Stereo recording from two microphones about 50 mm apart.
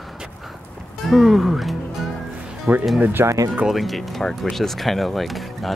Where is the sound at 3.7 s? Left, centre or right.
Centre.